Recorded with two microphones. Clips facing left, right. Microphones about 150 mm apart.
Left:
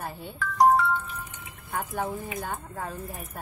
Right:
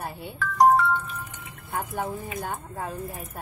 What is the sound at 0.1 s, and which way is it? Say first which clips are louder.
Music: right 2 dB; 10° right (ahead or behind).